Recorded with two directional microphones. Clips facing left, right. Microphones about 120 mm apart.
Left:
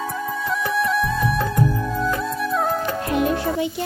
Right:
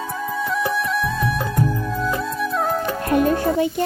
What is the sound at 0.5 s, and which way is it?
Music, centre (ahead or behind).